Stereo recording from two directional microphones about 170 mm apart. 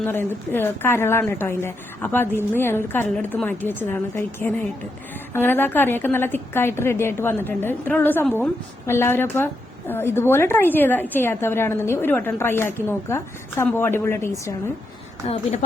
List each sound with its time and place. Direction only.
0.1 s a woman's voice: 15° left (ahead or behind)
15.3 s speech: 40° left (ahead or behind)